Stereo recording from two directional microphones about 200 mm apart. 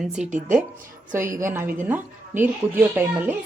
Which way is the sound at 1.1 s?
15° right (ahead or behind).